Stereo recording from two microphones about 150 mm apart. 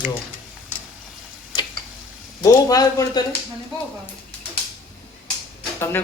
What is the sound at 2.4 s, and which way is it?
Speech, 25° left (ahead or behind).